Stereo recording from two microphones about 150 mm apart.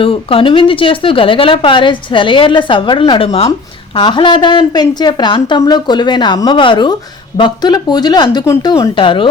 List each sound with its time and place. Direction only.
0.0 s speech: 35° left (ahead or behind); by 8.9 s 20° left (ahead or behind)
9.0 s speech: 35° left (ahead or behind)